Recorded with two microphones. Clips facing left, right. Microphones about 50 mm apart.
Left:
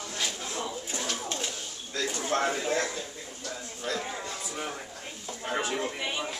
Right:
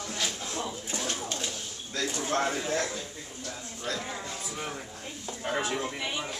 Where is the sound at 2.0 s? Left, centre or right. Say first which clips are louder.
Even; centre.